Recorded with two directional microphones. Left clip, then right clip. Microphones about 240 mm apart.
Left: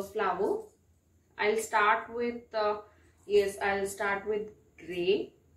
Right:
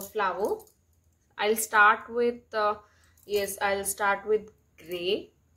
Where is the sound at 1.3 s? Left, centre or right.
Right.